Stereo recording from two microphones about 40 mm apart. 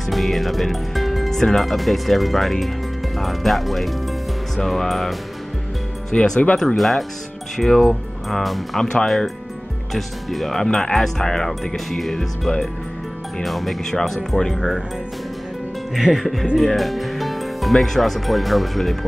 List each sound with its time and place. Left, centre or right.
0.1 s speech: centre
6.1 s speech: centre
6.8 s speech: centre
13.4 s speech: centre
14.5 s speech: centre
15.9 s speech: centre